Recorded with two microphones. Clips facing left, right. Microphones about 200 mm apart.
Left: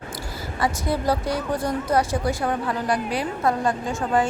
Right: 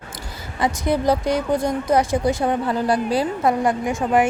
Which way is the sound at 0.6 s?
15° right (ahead or behind).